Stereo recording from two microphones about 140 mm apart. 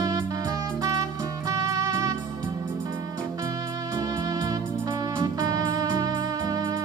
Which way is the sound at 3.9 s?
30° right (ahead or behind).